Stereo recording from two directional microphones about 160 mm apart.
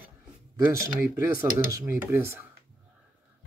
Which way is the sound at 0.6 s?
15° right (ahead or behind).